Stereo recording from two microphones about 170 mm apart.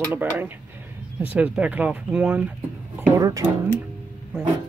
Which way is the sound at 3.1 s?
20° right (ahead or behind).